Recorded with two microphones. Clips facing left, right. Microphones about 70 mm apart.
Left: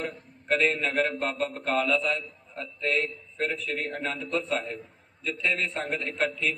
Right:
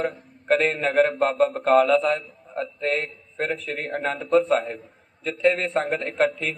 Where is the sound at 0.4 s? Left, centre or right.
Right.